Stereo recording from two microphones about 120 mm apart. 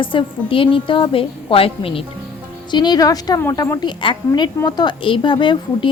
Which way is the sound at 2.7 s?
35° left (ahead or behind).